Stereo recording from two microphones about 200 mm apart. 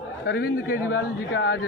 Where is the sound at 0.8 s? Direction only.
70° left (ahead or behind).